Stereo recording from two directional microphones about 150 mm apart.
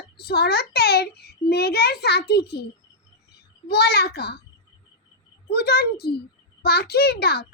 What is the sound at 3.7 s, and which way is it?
Speech, 90° left.